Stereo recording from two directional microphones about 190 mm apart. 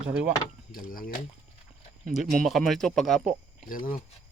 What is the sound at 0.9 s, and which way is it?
Speech, 50° left (ahead or behind).